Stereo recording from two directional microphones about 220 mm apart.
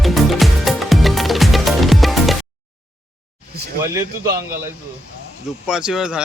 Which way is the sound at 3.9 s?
15° right (ahead or behind).